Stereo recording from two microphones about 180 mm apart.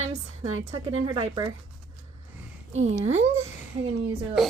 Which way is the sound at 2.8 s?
40° right (ahead or behind).